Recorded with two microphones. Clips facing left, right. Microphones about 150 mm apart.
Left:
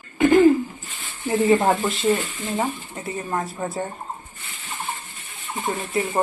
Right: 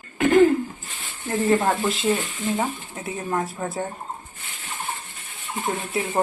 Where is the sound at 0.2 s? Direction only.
Centre (ahead or behind).